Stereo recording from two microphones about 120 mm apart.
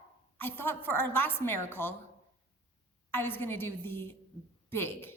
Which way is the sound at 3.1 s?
20° left (ahead or behind).